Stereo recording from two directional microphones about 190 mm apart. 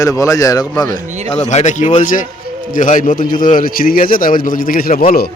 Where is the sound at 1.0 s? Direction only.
40° right (ahead or behind).